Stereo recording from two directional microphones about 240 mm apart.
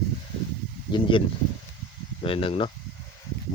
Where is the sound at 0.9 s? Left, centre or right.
Left.